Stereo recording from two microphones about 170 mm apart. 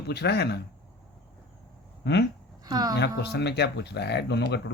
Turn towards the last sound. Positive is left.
turn(degrees=85)